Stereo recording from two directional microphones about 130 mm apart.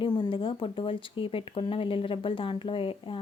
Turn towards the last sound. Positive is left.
turn(degrees=40)  # may be behind; listen again after turning